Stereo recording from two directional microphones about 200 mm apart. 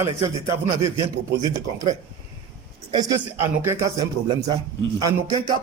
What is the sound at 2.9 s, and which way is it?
A man's voice, 20° right (ahead or behind).